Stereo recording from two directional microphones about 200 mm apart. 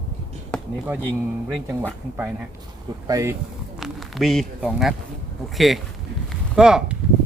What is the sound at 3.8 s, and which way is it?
A man's voice, centre (ahead or behind).